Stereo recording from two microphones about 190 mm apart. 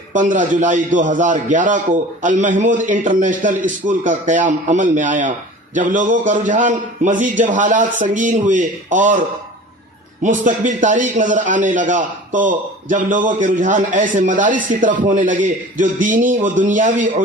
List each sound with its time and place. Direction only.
0.1 s a man's voice: 40° right (ahead or behind)
10.2 s a man's voice: 40° right (ahead or behind)